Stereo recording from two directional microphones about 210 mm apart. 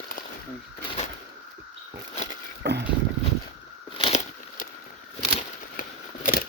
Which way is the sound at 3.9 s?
30° left (ahead or behind).